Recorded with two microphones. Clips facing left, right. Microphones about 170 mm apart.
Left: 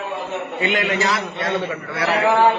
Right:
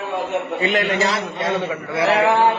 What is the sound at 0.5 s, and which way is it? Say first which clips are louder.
Speech: even; 35° right (ahead or behind).